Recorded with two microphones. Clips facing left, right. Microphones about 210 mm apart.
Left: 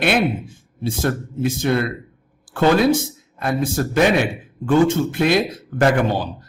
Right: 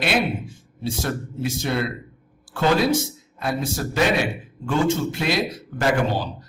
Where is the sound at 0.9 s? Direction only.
50° left (ahead or behind).